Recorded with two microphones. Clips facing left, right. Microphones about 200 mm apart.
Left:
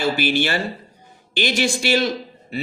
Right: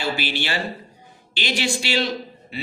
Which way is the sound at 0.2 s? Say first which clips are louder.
Left 6 dB; 50° left (ahead or behind).